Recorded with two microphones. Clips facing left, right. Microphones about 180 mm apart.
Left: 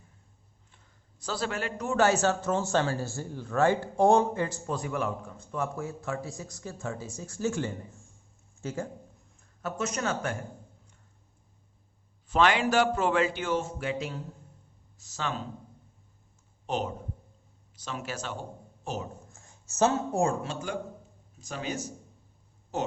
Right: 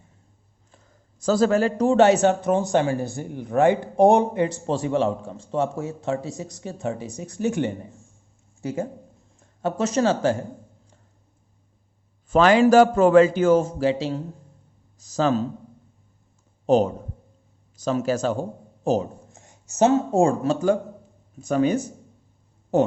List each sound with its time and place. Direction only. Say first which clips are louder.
1.2 s a man's voice: right 13 dB; 45° right (ahead or behind)
2.0 s speech: right 6 dB; 20° right (ahead or behind)
9.4 s speech: right 8 dB; 30° right (ahead or behind)
12.3 s a man's voice: right 9 dB; 40° right (ahead or behind)
16.6 s a man's voice: right 13 dB; 40° right (ahead or behind)
19.3 s a sound: right 5 dB; 20° right (ahead or behind)
20.4 s a man's voice: right 13 dB; 40° right (ahead or behind)